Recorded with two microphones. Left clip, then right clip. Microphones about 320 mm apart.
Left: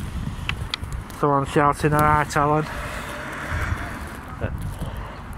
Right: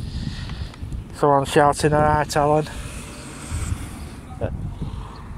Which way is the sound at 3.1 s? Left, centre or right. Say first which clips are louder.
Left 7 dB; centre.